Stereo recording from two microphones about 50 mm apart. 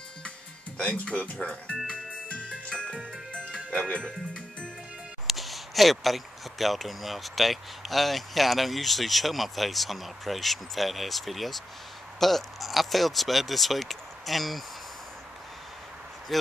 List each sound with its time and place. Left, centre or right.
0.8 s speech: left
1.9 s music: left
2.7 s music: centre
5.2 s speech: centre
16.3 s speech: centre